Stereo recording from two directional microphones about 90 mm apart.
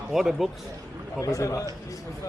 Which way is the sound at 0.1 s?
5° right (ahead or behind).